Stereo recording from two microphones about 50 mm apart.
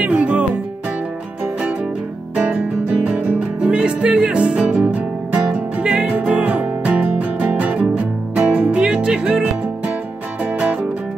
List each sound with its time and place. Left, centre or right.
0.0 s music: right
3.3 s music: centre
8.8 s music: centre
10.6 s music: right